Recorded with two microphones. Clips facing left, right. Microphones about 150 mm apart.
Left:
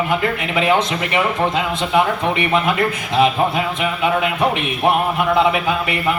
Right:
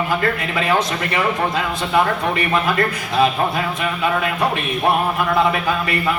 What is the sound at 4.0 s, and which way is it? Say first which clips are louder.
A man's voice: left 2 dB; 20° left (ahead or behind).